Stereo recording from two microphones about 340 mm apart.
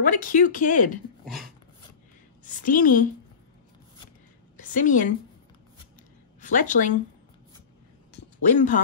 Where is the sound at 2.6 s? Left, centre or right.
Left.